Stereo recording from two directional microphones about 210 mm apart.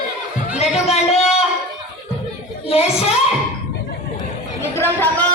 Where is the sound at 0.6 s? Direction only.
30° left (ahead or behind).